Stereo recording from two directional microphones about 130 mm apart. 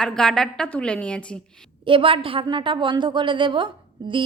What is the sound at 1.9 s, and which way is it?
A woman's voice, 45° right (ahead or behind).